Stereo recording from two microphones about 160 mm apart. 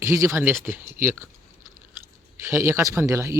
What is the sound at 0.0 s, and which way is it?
Speech, 20° right (ahead or behind).